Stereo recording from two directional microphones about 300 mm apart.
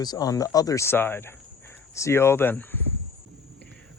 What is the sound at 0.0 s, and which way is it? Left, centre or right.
Speech, centre.